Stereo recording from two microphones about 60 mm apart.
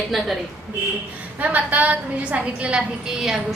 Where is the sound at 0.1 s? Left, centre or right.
Centre.